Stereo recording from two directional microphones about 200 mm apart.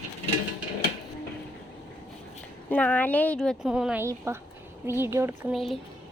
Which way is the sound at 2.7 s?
5° left (ahead or behind).